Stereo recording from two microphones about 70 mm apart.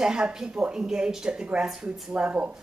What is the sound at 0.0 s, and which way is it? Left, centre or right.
A woman's voice, centre.